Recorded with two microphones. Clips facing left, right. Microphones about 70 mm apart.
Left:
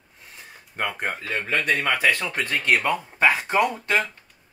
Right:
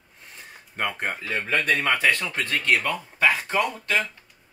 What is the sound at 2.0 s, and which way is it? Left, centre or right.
Speech, centre.